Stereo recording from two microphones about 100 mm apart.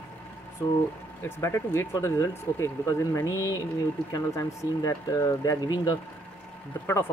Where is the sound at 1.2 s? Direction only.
25° left (ahead or behind).